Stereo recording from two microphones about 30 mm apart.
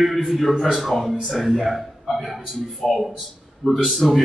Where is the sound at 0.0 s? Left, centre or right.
Centre.